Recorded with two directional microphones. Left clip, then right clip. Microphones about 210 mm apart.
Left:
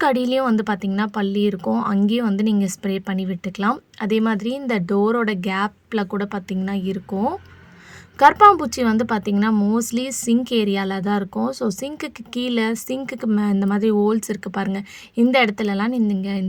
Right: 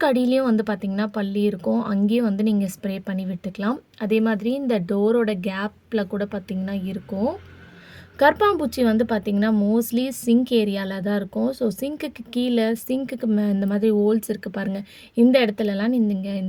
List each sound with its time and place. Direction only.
0.0 s a woman's voice: 30° left (ahead or behind)